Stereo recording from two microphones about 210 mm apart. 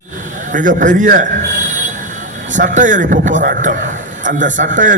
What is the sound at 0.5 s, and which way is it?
Speech, 40° right (ahead or behind).